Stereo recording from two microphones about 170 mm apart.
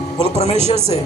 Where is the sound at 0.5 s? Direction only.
35° right (ahead or behind).